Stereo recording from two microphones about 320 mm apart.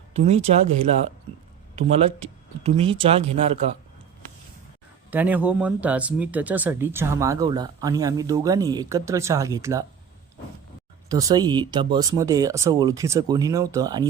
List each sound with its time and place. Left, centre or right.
0.1 s speech: centre
1.7 s speech: centre
5.1 s speech: centre
11.1 s speech: centre